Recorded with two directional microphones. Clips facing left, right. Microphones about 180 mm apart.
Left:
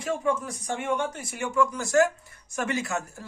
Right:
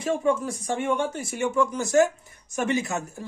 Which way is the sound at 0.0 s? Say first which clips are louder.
Right 3 dB; 30° right (ahead or behind).